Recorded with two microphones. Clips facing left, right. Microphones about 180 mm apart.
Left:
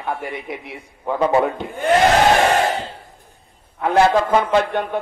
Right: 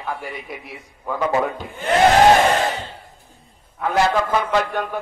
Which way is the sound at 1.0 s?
30° left (ahead or behind).